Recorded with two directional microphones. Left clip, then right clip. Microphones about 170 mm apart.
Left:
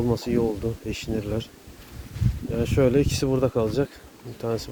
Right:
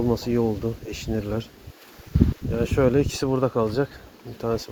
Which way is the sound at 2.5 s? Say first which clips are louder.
Even; 15° left (ahead or behind).